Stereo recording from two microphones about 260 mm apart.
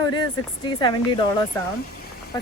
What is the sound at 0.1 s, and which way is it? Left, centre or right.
Speech, centre.